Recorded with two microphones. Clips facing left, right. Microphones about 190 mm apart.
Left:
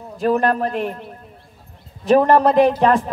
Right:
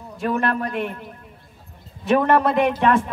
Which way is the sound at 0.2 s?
35° left (ahead or behind).